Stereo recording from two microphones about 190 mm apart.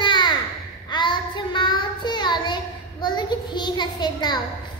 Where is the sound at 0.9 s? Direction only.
25° left (ahead or behind).